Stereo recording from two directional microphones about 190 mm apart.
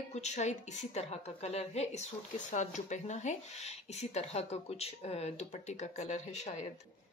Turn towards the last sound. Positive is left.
turn(degrees=35)  # may be behind; listen again after turning